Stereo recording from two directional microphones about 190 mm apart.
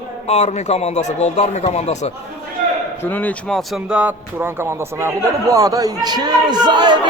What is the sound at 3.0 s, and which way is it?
Speech, 10° left (ahead or behind).